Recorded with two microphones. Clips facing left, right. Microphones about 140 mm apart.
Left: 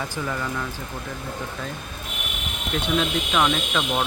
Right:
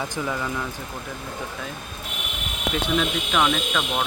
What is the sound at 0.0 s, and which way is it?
Speech, 5° right (ahead or behind).